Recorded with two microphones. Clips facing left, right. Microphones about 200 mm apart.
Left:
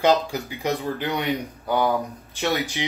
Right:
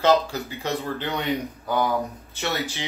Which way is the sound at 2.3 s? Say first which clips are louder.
Left 4 dB; 15° left (ahead or behind).